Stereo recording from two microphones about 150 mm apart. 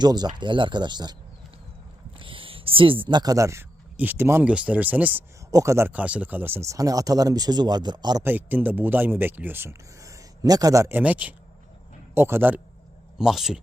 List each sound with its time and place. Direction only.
0.0 s speech: 30° right (ahead or behind)
2.1 s speech: 35° right (ahead or behind); by 5.2 s 10° right (ahead or behind)
5.5 s speech: 20° right (ahead or behind)
8.2 s speech: 10° right (ahead or behind)